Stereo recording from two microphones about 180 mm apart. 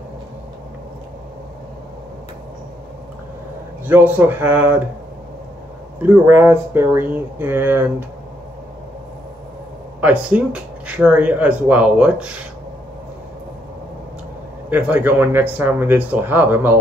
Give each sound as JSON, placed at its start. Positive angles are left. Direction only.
{"t": 3.8, "sound": "speech", "side_deg": -10}
{"t": 6.0, "sound": "speech", "side_deg": -10}
{"t": 9.9, "sound": "speech", "side_deg": -10}
{"t": 14.7, "sound": "speech", "side_deg": -10}